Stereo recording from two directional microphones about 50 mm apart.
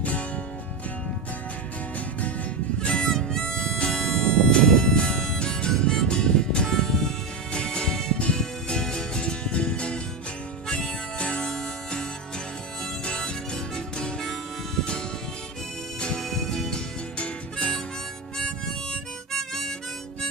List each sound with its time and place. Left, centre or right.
0.0 s music: left
2.8 s harmonica: centre
7.5 s music: centre
10.7 s harmonica: centre
13.1 s music: centre
16.2 s music: centre
17.2 s harmonica: centre